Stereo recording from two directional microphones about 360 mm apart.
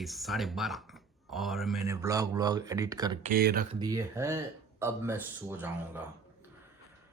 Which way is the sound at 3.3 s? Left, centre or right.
Right.